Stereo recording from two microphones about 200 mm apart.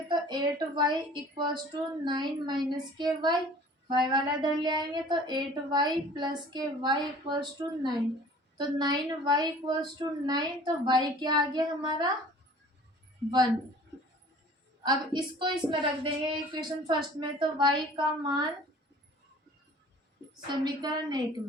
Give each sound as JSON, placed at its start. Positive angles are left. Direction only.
{"t": 0.1, "sound": "a woman's voice", "side_deg": -20}
{"t": 14.8, "sound": "a woman's voice", "side_deg": -20}
{"t": 20.5, "sound": "a woman's voice", "side_deg": -20}